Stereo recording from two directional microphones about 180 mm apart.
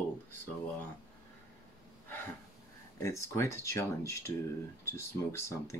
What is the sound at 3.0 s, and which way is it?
Speech, 15° left (ahead or behind).